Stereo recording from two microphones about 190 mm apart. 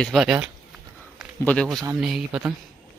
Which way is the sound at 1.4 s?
5° left (ahead or behind).